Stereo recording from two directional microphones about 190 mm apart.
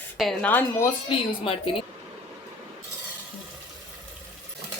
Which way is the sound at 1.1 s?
25° left (ahead or behind).